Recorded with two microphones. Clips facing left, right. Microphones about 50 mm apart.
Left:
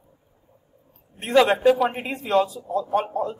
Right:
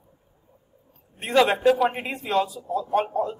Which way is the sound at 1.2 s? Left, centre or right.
Centre.